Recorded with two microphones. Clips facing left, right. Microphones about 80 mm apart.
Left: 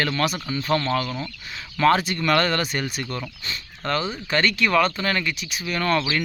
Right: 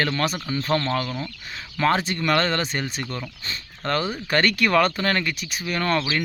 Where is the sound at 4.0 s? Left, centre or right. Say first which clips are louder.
Right 2 dB; right.